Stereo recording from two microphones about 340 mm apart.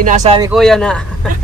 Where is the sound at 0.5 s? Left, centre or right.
Centre.